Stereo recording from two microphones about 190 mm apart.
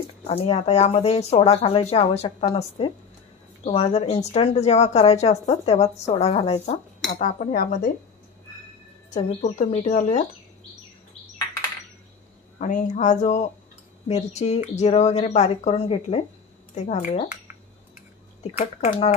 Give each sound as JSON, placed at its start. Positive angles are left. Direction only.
{"t": 0.3, "sound": "a woman's voice", "side_deg": 35}
{"t": 9.1, "sound": "a woman's voice", "side_deg": 40}
{"t": 12.5, "sound": "a woman's voice", "side_deg": 40}
{"t": 18.6, "sound": "a woman's voice", "side_deg": 35}